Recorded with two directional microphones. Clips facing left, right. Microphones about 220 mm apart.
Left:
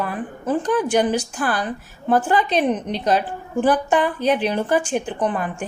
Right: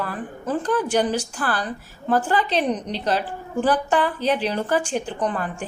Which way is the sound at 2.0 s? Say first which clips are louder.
Left 3 dB; 15° left (ahead or behind).